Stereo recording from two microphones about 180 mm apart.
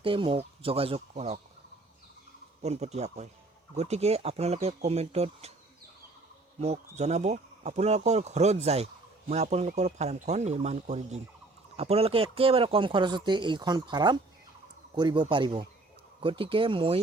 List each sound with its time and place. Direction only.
0.0 s speech: 30° right (ahead or behind)
2.6 s speech: 35° right (ahead or behind)
6.6 s speech: 35° right (ahead or behind)